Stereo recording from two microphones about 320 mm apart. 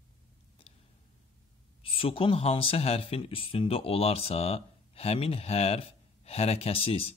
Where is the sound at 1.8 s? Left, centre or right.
Centre.